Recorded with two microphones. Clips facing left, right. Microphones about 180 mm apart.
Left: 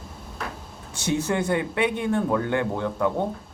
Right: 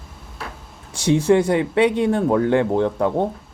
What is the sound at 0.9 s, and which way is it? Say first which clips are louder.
Speech: right 9 dB; 30° right (ahead or behind).